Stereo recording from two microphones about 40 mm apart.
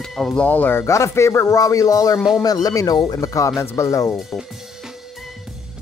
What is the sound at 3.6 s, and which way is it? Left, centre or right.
Speech, left.